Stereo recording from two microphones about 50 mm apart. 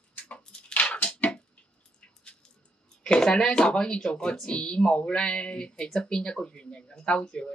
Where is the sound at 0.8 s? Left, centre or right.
Left.